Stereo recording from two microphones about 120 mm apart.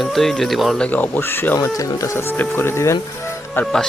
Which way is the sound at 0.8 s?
15° left (ahead or behind).